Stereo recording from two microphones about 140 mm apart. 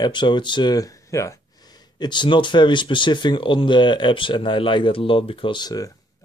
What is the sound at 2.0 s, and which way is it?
Speech, 35° left (ahead or behind).